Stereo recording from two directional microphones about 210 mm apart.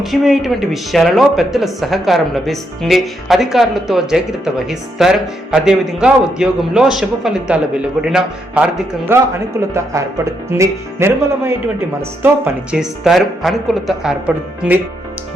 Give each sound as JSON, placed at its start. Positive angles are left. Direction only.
{"t": 0.0, "sound": "a man's voice", "side_deg": 0}
{"t": 12.7, "sound": "speech", "side_deg": 0}